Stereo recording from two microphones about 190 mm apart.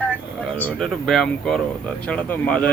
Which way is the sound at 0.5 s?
5° left (ahead or behind).